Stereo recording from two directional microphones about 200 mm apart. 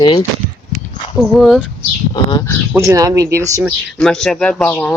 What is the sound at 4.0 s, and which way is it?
Speech, 5° left (ahead or behind).